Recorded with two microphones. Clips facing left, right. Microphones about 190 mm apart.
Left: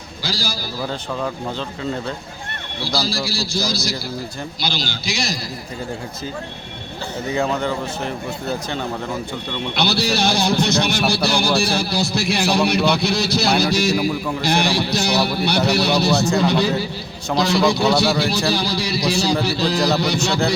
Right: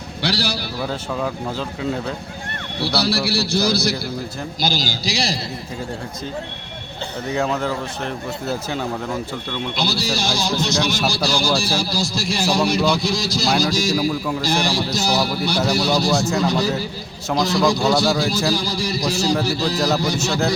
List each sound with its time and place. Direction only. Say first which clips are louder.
0.2 s a man's voice: right 4 dB; 65° right (ahead or behind)
0.9 s speech: right 1 dB; 5° right (ahead or behind)
2.8 s speech: right 3 dB; 65° right (ahead or behind)
4.6 s a man's voice: right 3 dB; 40° right (ahead or behind)
7.3 s speech: left 1 dB; centre (ahead or behind)
9.7 s a man's voice: left 5 dB; 65° left (ahead or behind)
14.1 s speech: even; centre (ahead or behind)
14.4 s a man's voice: left 4 dB; 65° left (ahead or behind)